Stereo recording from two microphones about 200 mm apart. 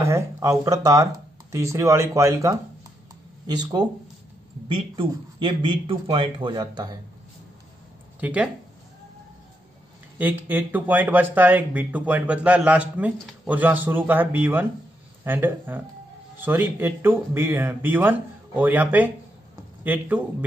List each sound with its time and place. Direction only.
0.0 s a man's voice: 15° right (ahead or behind)
8.2 s speech: 5° right (ahead or behind)
10.1 s a man's voice: 10° right (ahead or behind)